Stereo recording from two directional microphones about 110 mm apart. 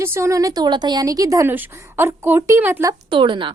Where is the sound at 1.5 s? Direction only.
20° right (ahead or behind).